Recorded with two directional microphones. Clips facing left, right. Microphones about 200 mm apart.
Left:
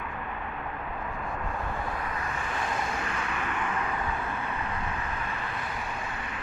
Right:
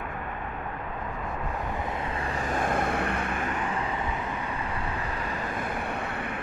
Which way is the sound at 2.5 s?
50° right (ahead or behind).